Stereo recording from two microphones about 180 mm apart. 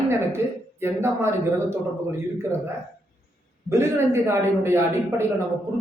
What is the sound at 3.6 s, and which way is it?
Speech, 15° right (ahead or behind).